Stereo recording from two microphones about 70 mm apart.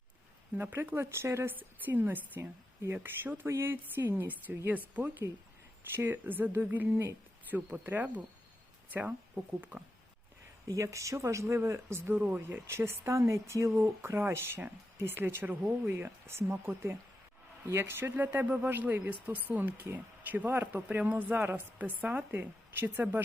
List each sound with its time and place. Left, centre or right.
0.5 s speech: right
1.5 s speech: right
10.7 s speech: right